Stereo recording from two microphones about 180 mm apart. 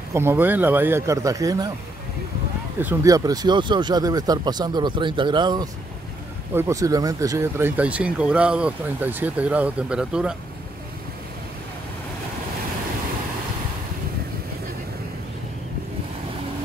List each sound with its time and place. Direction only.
0.1 s speech: 15° right (ahead or behind)
2.8 s speech: 15° right (ahead or behind)